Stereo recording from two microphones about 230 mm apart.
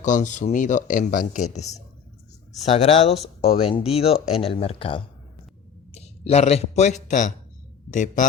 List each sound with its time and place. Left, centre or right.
0.0 s speech: left